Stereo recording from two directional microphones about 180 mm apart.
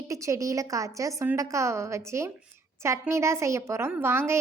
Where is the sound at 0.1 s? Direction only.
15° right (ahead or behind).